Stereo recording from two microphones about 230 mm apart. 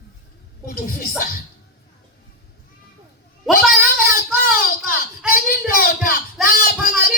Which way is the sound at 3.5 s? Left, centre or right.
Left.